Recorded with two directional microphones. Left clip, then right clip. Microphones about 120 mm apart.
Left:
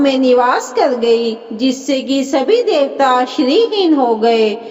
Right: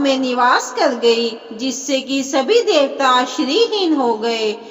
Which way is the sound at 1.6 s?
50° left (ahead or behind).